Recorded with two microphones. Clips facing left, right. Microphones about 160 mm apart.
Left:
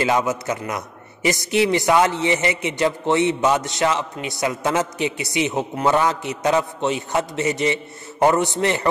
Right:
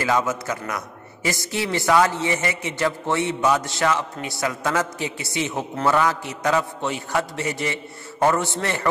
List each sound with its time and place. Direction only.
0.0 s a man's voice: 20° left (ahead or behind)